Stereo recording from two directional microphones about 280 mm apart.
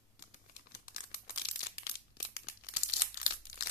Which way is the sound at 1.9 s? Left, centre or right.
Left.